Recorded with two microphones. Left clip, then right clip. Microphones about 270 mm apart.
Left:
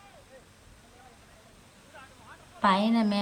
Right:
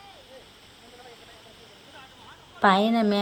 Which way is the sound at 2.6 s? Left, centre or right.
Centre.